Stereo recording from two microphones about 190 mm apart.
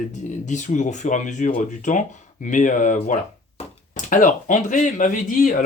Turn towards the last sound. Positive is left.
turn(degrees=45)  # may be behind; listen again after turning